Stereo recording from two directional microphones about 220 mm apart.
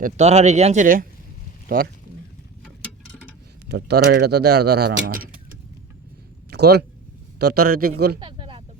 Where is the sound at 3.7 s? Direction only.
50° right (ahead or behind).